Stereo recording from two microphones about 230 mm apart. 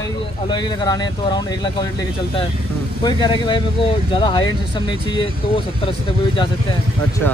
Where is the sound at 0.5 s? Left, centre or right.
Centre.